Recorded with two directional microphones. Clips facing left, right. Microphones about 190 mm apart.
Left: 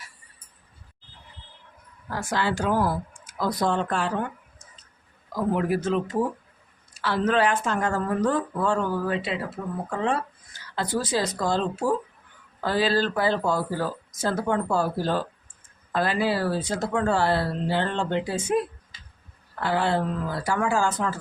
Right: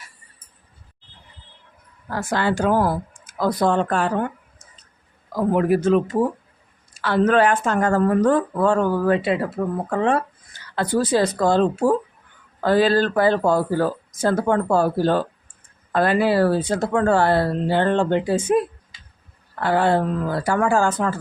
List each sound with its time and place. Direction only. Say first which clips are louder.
2.0 s speech: right 4 dB; 55° right (ahead or behind)
5.5 s speech: right 9 dB; 55° right (ahead or behind)
7.0 s speech: right 5 dB; 55° right (ahead or behind)